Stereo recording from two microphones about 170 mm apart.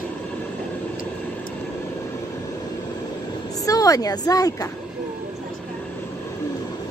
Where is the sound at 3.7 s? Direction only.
20° left (ahead or behind).